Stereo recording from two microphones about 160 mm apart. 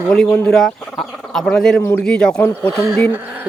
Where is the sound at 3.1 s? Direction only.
10° right (ahead or behind).